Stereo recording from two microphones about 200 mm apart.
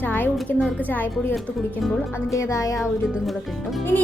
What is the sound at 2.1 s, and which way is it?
Speech, 15° left (ahead or behind).